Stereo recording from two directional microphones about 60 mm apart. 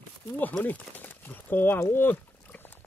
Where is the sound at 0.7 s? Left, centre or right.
Left.